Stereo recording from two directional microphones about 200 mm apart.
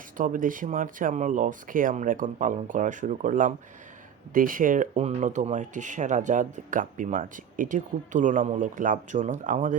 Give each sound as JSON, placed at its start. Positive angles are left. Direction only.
{"t": 0.2, "sound": "speech", "side_deg": -40}